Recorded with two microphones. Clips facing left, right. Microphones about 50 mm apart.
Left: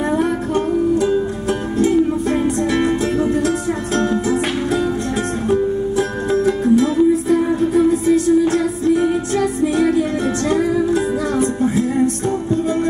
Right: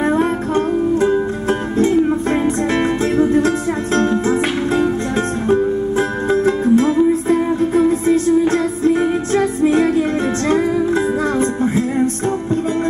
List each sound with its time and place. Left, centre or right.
1.8 s music: right